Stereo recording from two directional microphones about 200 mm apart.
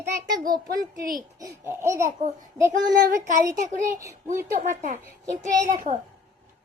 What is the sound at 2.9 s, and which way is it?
A child's voice, 45° right (ahead or behind).